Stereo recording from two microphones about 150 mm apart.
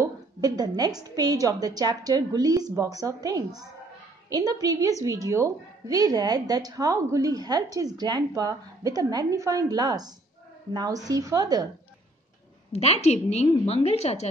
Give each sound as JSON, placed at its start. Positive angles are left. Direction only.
{"t": 0.0, "sound": "a woman's voice", "side_deg": -25}
{"t": 12.7, "sound": "a woman's voice", "side_deg": 45}